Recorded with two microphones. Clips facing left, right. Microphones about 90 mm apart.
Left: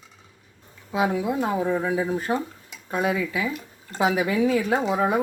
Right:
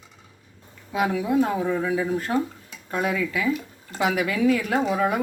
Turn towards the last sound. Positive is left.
turn(degrees=25)  # may be behind; listen again after turning